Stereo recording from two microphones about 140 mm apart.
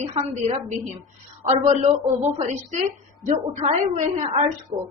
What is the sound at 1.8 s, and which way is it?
A woman's voice, 50° right (ahead or behind).